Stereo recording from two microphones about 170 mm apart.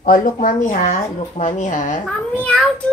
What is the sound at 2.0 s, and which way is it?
Speech, 5° left (ahead or behind).